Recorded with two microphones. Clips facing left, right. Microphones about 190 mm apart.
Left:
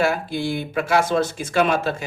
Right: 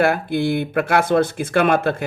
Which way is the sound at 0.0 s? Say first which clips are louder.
Right 4 dB; 55° right (ahead or behind).